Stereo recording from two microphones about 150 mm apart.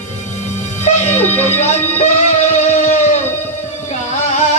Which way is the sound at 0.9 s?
50° left (ahead or behind).